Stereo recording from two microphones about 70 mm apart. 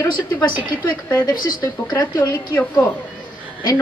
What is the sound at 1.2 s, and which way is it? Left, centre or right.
Speech, left.